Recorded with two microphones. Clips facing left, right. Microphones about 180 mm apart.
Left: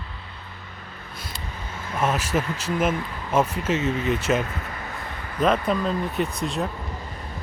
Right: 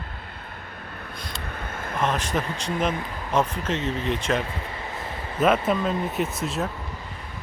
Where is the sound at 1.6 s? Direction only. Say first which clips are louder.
Right 3 dB; 55° right (ahead or behind).